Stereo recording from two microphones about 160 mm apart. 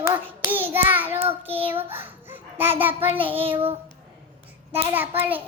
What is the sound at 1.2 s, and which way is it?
Child singing, 35° right (ahead or behind).